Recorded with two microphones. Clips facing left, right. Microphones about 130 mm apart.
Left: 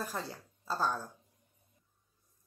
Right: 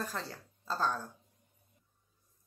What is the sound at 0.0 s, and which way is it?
Speech, 15° left (ahead or behind).